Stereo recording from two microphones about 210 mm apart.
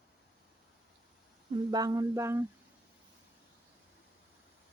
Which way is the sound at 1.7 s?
20° right (ahead or behind).